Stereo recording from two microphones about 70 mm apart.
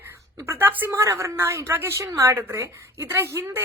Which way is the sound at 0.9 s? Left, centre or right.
Right.